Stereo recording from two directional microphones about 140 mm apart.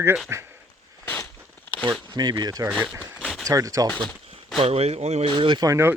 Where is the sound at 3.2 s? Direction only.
Centre (ahead or behind).